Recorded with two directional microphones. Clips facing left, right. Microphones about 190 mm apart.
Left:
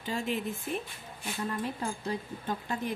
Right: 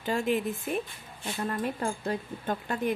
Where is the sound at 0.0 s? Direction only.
60° right (ahead or behind).